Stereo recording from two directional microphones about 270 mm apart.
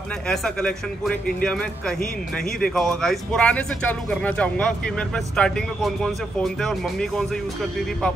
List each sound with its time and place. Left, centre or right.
0.3 s speech: centre